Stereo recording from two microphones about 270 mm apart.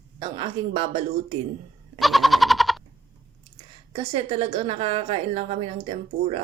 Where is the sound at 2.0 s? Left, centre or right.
Centre.